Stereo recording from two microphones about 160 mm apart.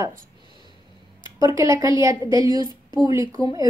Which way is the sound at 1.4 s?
20° right (ahead or behind).